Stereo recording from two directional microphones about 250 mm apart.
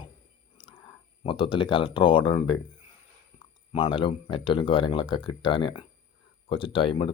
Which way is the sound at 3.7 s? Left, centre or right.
Centre.